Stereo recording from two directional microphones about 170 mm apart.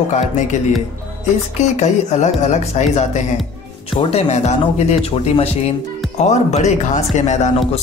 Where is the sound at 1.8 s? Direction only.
40° left (ahead or behind).